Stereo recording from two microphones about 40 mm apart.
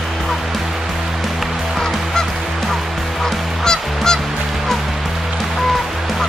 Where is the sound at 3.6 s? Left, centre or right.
Centre.